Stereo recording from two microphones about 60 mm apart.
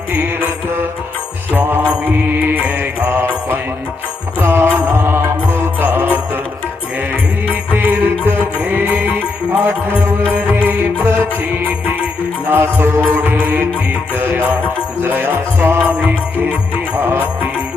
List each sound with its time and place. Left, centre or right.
2.5 s mantra: right
4.4 s music: right
7.4 s music: right
12.5 s music: right
13.0 s music: right